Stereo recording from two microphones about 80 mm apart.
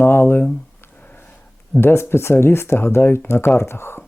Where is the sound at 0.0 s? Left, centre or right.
Left.